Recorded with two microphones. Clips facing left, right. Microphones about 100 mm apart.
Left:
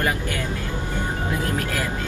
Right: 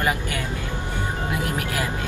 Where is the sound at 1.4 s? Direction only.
15° right (ahead or behind).